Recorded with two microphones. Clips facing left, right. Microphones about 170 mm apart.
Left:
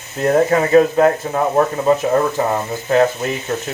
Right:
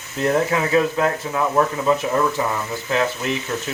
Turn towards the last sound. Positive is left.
turn(degrees=45)  # may be behind; listen again after turning